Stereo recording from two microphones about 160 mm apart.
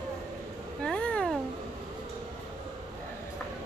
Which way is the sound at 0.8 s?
5° left (ahead or behind).